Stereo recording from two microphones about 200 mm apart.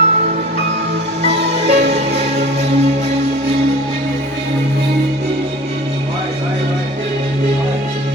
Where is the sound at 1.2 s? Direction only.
35° right (ahead or behind).